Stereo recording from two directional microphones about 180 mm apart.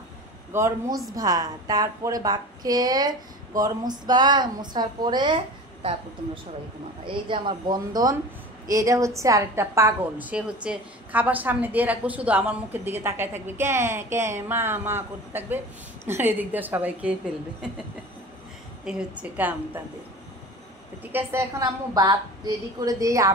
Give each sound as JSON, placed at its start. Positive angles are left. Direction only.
{"t": 0.5, "sound": "a woman's voice", "side_deg": -15}
{"t": 18.9, "sound": "a woman's voice", "side_deg": -5}
{"t": 21.0, "sound": "a woman's voice", "side_deg": -10}